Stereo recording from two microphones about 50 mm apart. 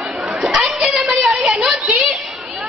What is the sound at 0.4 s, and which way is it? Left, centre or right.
Children playing, centre.